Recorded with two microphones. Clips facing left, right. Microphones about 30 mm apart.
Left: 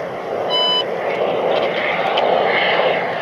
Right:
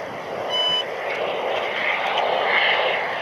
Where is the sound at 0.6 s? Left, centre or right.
Left.